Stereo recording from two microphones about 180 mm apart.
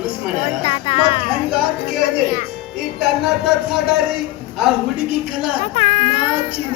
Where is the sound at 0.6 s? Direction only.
30° left (ahead or behind).